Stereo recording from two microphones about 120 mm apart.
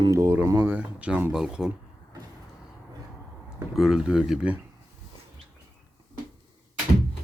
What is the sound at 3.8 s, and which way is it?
Speech, 5° right (ahead or behind).